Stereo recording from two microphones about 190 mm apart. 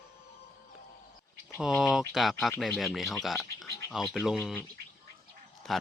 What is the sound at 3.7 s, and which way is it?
Gargling, 15° left (ahead or behind).